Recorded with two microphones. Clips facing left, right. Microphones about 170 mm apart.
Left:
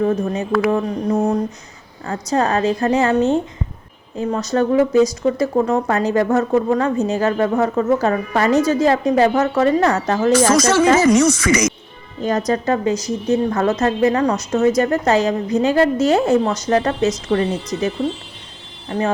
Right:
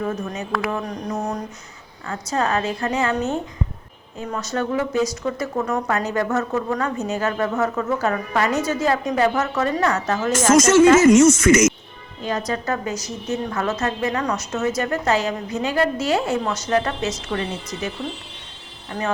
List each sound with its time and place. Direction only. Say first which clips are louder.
0.0 s a woman's voice: left 8 dB; 30° left (ahead or behind)
0.7 s mantra: left 8 dB; 30° left (ahead or behind)
2.0 s a woman's voice: left 4 dB; 35° left (ahead or behind)
12.2 s speech: left 6 dB; 45° left (ahead or behind)
12.6 s mantra: left 7 dB; 25° left (ahead or behind)
13.2 s a woman's voice: left 7 dB; 35° left (ahead or behind)